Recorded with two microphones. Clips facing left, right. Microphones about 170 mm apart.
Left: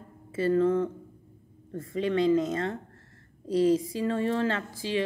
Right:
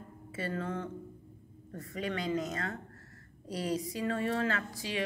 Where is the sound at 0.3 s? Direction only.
30° left (ahead or behind).